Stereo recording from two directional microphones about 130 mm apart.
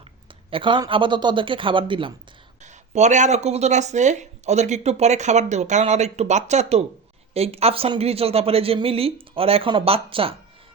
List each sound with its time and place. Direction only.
0.5 s a man's voice: 40° right (ahead or behind)
2.6 s speech: 65° right (ahead or behind); by 10.3 s 45° right (ahead or behind)